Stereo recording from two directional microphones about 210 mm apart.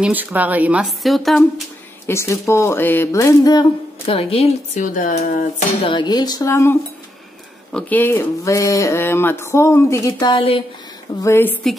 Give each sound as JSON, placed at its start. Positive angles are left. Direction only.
{"t": 0.0, "sound": "speech", "side_deg": -10}
{"t": 2.0, "sound": "speech", "side_deg": 15}
{"t": 11.2, "sound": "speech", "side_deg": 10}